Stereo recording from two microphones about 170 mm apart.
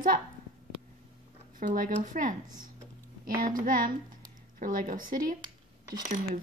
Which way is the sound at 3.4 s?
55° right (ahead or behind).